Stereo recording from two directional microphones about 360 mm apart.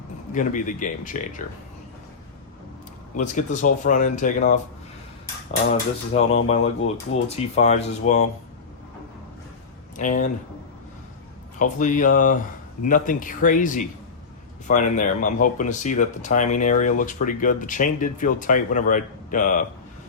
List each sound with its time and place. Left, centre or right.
0.3 s speech: left
3.2 s speech: left
6.1 s speech: centre
10.0 s speech: left
11.6 s speech: left